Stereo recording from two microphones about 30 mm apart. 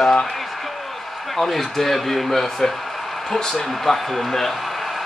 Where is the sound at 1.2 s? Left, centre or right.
Centre.